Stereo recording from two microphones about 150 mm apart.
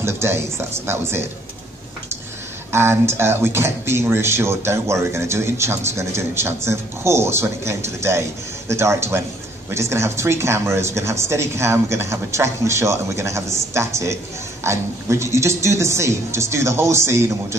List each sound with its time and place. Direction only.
0.0 s speech: 15° right (ahead or behind)
2.7 s speech: 15° right (ahead or behind)